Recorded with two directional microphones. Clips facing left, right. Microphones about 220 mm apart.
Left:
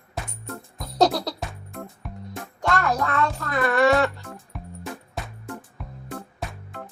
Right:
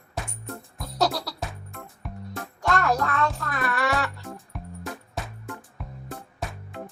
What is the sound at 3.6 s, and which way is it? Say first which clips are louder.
Music: left 8 dB; 25° left (ahead or behind).